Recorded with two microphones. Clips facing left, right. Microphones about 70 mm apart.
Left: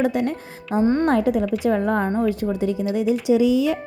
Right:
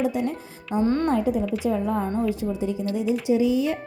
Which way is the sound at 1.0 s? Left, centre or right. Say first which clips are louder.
Left 4 dB; left.